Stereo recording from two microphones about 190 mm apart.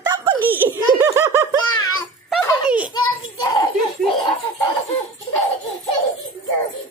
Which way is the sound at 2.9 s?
20° left (ahead or behind).